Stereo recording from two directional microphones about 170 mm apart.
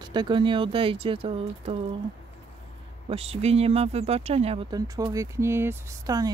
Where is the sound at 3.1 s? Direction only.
35° right (ahead or behind).